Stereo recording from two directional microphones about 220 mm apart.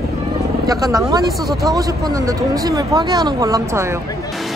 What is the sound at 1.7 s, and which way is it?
Speech, 15° right (ahead or behind).